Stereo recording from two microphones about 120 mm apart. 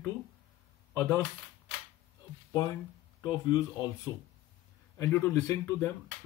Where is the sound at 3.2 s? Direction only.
35° left (ahead or behind).